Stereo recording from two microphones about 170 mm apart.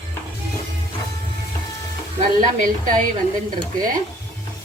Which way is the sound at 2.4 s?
55° right (ahead or behind).